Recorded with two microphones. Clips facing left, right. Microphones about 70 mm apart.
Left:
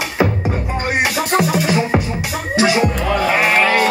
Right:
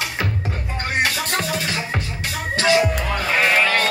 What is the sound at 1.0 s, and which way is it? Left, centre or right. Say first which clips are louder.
Music: left 5 dB; centre.